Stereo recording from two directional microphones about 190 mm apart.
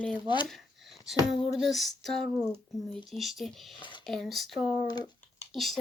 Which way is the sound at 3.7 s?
25° left (ahead or behind).